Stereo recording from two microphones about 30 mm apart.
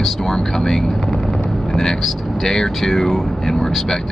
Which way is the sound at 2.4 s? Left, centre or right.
Centre.